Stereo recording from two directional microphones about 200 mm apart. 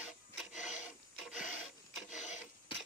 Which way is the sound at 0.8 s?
5° right (ahead or behind).